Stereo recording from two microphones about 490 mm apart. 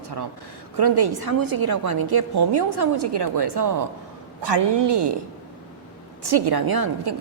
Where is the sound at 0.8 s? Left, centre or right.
Right.